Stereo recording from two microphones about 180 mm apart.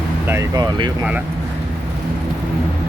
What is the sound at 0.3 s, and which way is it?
Speech, 20° right (ahead or behind).